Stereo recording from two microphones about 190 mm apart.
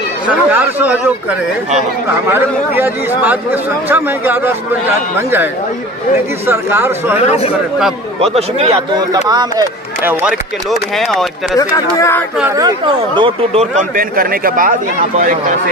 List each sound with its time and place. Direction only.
0.3 s a man's voice: 10° right (ahead or behind)
2.2 s a man's voice: 10° right (ahead or behind)
7.2 s speech: 35° left (ahead or behind)
8.4 s speech: 35° right (ahead or behind)
9.3 s speech: 20° right (ahead or behind)
10.0 s speech: 5° right (ahead or behind)
11.5 s speech: 15° left (ahead or behind)
12.4 s speech: 15° right (ahead or behind); by 13.7 s 30° right (ahead or behind)
13.9 s speech: 50° right (ahead or behind)